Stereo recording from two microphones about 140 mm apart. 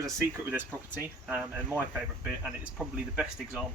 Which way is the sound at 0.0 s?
15° right (ahead or behind).